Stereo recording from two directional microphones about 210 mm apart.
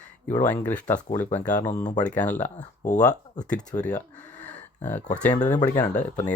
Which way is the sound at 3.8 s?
5° left (ahead or behind).